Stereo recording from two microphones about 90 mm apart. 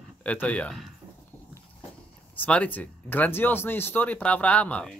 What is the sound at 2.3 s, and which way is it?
Speech, 15° left (ahead or behind).